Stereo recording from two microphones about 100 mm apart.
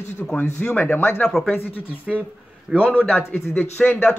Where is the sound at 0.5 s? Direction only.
15° left (ahead or behind).